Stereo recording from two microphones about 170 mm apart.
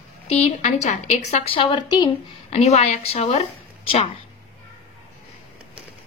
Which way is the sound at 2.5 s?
40° left (ahead or behind).